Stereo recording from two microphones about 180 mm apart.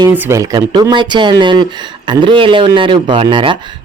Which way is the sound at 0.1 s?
15° right (ahead or behind).